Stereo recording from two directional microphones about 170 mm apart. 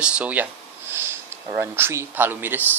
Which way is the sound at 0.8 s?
15° right (ahead or behind).